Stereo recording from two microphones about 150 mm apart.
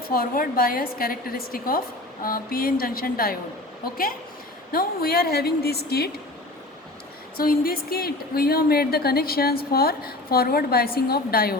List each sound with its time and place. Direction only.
0.1 s a woman's voice: 80° left
4.7 s a woman's voice: 85° left
7.3 s a woman's voice: 80° left